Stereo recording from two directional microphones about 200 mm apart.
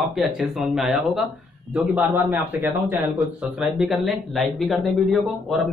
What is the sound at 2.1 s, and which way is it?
Speech, 15° right (ahead or behind).